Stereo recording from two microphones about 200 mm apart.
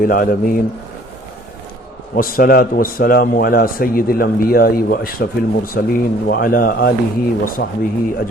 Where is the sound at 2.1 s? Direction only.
45° left (ahead or behind).